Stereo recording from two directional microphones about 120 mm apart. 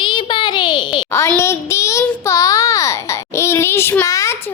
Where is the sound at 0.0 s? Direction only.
40° left (ahead or behind).